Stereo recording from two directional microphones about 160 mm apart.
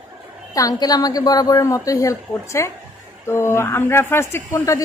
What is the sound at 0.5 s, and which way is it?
A woman's voice, 25° left (ahead or behind).